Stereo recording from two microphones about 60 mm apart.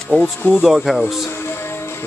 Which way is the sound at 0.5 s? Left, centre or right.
Centre.